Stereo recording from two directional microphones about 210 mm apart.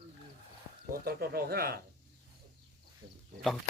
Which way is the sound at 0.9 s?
45° right (ahead or behind).